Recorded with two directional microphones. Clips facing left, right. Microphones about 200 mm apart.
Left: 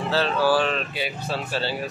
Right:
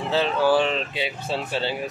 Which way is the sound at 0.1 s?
20° right (ahead or behind).